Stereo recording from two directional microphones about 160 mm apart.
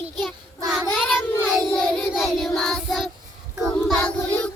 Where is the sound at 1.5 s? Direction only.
5° left (ahead or behind).